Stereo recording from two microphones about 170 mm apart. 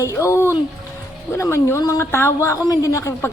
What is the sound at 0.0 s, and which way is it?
Speech, 15° left (ahead or behind).